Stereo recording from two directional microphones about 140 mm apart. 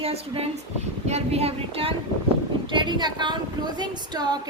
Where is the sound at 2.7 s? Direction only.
35° right (ahead or behind).